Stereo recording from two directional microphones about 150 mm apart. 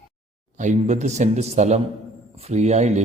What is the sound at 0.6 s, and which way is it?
A man's voice, 50° right (ahead or behind).